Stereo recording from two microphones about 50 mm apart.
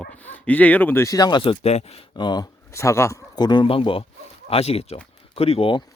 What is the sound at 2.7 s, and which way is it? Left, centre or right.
Speech, left.